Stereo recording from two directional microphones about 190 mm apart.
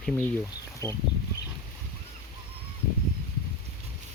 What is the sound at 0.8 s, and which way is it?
Speech, 15° left (ahead or behind).